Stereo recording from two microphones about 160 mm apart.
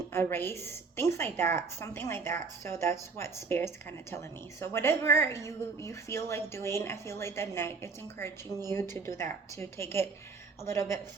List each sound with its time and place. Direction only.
0.1 s a woman's voice: 15° left (ahead or behind)
8.4 s speech: 20° right (ahead or behind)
8.7 s a woman's voice: 15° left (ahead or behind)